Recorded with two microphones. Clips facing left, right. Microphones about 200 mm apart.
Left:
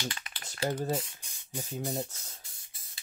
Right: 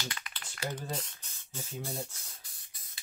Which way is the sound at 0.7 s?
10° left (ahead or behind).